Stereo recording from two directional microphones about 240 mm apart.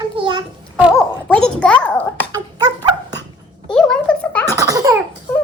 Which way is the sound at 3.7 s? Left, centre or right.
Centre.